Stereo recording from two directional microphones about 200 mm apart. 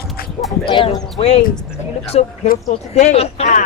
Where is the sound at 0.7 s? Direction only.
25° left (ahead or behind).